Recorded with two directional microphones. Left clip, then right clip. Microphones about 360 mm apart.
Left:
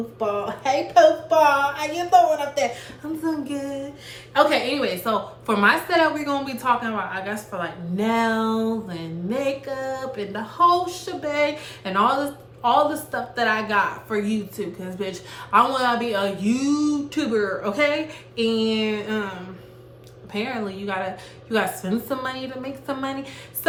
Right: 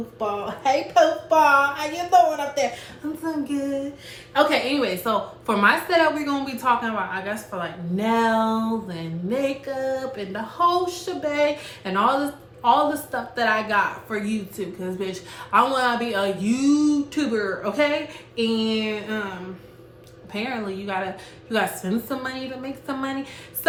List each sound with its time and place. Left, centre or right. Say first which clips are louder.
0.2 s a woman's voice: left 1 dB; centre
20.3 s a woman's voice: left 1 dB; centre